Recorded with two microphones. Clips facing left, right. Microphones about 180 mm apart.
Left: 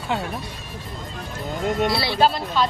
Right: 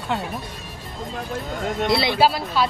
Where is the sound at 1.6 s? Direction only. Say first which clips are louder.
Left 2 dB; centre (ahead or behind).